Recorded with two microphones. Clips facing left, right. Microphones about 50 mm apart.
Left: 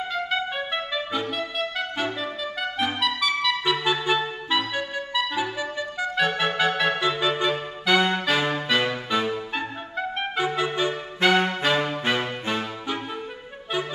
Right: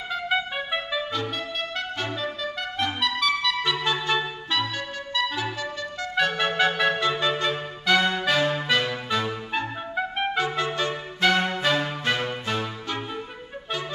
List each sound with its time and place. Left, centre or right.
0.1 s trumpet: centre
1.6 s music: centre
6.1 s clarinet: centre
8.0 s music: centre
10.3 s music: centre
11.7 s music: left